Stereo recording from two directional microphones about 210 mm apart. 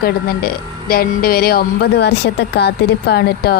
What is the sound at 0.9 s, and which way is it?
A woman's voice, 45° left (ahead or behind).